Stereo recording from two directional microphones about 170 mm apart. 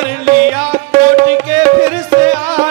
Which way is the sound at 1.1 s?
10° right (ahead or behind).